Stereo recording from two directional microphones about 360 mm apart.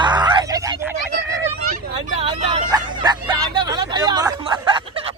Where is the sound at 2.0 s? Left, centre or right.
Centre.